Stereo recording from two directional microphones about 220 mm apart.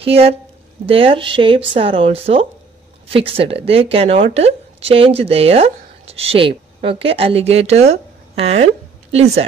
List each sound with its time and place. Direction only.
0.0 s speech: 25° right (ahead or behind)